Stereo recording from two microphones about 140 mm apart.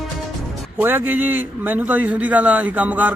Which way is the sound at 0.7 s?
15° right (ahead or behind).